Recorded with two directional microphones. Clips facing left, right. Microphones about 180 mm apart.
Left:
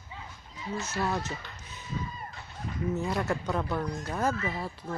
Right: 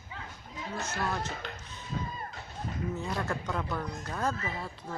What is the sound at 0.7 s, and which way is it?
Speech, 50° right (ahead or behind).